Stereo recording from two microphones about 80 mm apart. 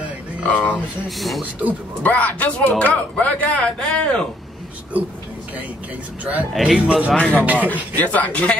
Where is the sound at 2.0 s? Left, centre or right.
Centre.